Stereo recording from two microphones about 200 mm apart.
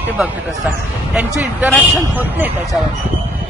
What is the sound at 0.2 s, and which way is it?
Speech, 10° right (ahead or behind).